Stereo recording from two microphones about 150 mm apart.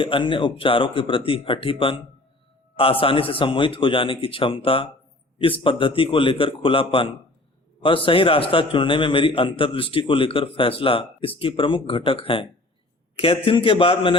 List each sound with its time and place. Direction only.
0.0 s a man's voice: 35° left (ahead or behind)